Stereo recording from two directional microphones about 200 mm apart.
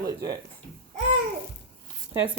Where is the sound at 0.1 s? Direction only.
20° right (ahead or behind).